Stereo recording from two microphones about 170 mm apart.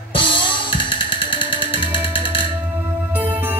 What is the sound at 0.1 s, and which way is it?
Music, 30° left (ahead or behind).